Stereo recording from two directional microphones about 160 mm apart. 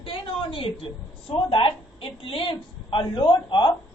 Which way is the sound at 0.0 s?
35° left (ahead or behind).